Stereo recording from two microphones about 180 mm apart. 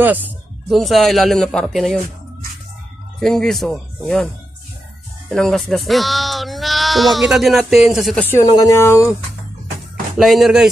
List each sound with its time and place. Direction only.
0.0 s a sound: 10° right (ahead or behind)
0.7 s speech: centre (ahead or behind)
3.2 s speech: centre (ahead or behind)
5.3 s speech: centre (ahead or behind)
8.5 s speech: 20° left (ahead or behind)
10.1 s speech: centre (ahead or behind)